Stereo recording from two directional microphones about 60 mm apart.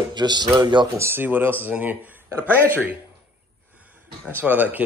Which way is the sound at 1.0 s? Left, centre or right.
Right.